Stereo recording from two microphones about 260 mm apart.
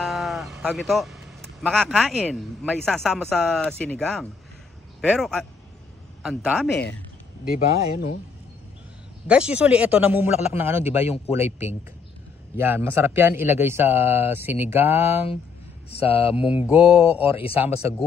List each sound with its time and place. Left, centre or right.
0.0 s speech: centre
7.5 s speech: left
9.3 s speech: centre
11.1 s mantra: left
12.5 s speech: centre
15.9 s mantra: left
16.3 s speech: centre
17.4 s mantra: left